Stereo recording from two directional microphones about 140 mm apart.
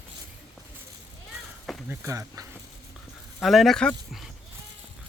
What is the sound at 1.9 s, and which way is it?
Speech, 20° right (ahead or behind).